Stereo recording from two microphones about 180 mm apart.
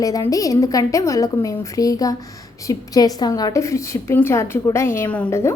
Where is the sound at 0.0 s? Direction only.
20° left (ahead or behind).